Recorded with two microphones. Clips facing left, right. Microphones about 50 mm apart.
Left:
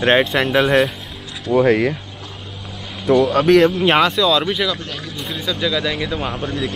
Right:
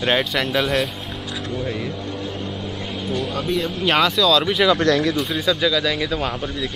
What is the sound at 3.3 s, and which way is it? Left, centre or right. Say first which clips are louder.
Speech: left 11 dB; left.